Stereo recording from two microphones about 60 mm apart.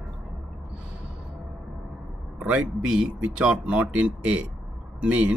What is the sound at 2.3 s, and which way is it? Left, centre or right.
A man's voice, right.